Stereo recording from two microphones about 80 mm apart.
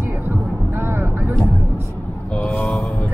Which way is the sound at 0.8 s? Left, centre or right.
Right.